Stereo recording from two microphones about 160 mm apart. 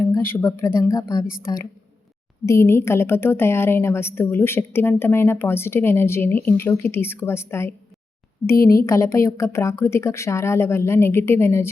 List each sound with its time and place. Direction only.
0.0 s speech: 15° left (ahead or behind)
2.5 s a woman's voice: 15° left (ahead or behind)